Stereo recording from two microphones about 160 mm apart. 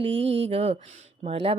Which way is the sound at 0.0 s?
40° right (ahead or behind).